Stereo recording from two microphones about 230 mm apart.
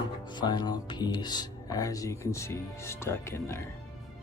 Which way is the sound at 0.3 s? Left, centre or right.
Centre.